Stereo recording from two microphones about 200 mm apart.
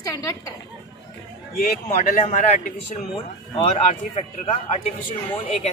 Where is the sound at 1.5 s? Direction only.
45° left (ahead or behind).